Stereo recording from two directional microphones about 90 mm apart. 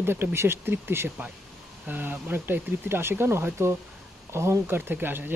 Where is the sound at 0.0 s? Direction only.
25° right (ahead or behind).